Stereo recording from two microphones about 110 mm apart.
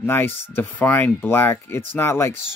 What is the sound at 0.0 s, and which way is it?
Speech, 20° left (ahead or behind).